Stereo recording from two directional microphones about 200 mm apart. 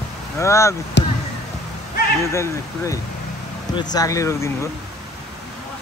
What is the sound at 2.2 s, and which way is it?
Speech, 15° left (ahead or behind).